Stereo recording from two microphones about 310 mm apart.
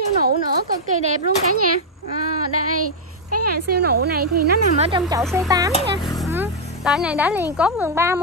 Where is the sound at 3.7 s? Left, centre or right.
Right.